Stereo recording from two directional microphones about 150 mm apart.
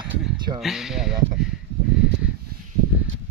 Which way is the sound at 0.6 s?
5° right (ahead or behind).